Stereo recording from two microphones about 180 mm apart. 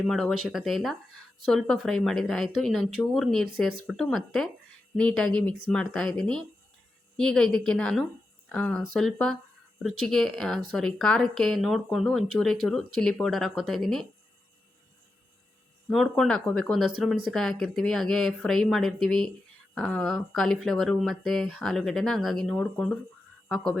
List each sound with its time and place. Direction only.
0.0 s speech: centre (ahead or behind)
15.9 s speech: centre (ahead or behind)